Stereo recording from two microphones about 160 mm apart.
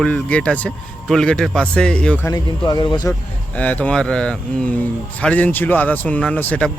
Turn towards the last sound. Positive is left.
turn(degrees=10)  # may be behind; listen again after turning